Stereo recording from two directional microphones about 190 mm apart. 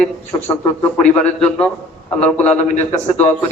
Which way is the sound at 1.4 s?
5° left (ahead or behind).